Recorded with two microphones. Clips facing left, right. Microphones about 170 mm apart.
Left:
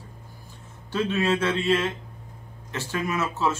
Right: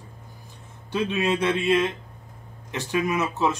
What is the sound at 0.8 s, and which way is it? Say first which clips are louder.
Speech: even; 15° right (ahead or behind).